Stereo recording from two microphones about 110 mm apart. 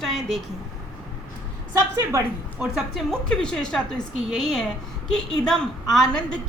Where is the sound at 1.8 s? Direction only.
30° right (ahead or behind).